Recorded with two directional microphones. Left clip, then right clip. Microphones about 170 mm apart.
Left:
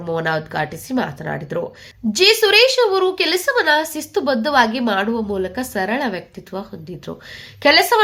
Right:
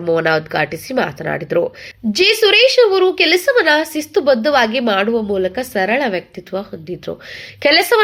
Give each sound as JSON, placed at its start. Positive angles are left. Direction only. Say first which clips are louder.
{"t": 0.0, "sound": "speech", "louder": "right 6 dB", "side_deg": -20}